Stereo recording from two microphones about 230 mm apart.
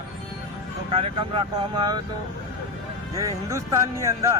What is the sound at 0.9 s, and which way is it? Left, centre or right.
Speech, right.